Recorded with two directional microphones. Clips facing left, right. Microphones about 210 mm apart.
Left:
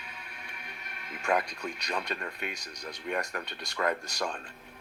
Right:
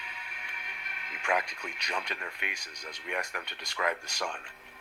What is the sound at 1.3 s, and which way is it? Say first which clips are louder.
Speech: left 3 dB; 35° left (ahead or behind).